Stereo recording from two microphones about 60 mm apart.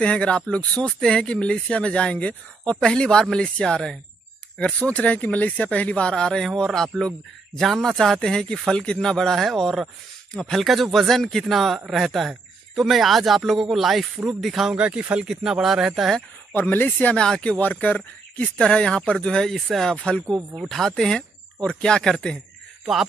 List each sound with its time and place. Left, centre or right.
0.0 s speech: left; by 14.8 s centre
14.8 s speech: centre
16.5 s speech: left
17.1 s speech: centre
17.6 s a man's voice: left
18.6 s speech: centre
20.0 s speech: centre
20.5 s speech: centre